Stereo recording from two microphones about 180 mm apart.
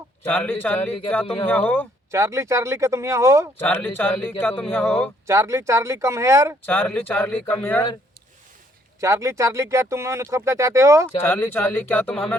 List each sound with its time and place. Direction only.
0.3 s speech: 10° left (ahead or behind)
2.0 s speech: 15° right (ahead or behind)
3.6 s speech: 10° left (ahead or behind)
5.2 s speech: 15° right (ahead or behind)
6.7 s speech: 10° left (ahead or behind)
9.0 s speech: 15° right (ahead or behind)
11.2 s speech: 10° left (ahead or behind)